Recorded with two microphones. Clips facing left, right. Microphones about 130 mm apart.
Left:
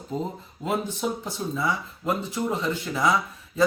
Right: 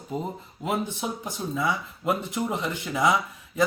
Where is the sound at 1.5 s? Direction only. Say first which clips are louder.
Right 1 dB; 15° right (ahead or behind).